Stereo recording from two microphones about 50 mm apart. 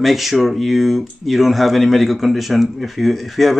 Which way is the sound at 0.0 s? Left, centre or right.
Centre.